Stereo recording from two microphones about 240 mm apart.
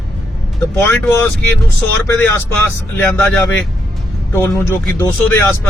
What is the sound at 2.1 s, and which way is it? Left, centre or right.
Speech, centre.